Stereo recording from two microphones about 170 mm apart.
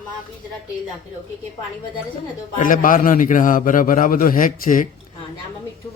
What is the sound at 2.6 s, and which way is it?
Speech, 50° left (ahead or behind).